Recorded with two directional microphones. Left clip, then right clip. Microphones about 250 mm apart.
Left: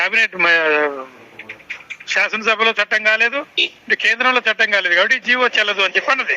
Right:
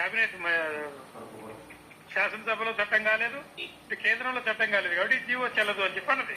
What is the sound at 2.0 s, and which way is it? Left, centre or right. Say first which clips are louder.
A man's voice: left 12 dB; left.